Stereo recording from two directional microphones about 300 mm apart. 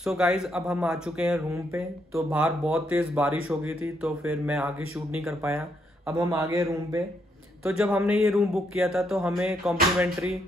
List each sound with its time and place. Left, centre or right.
0.0 s a man's voice: centre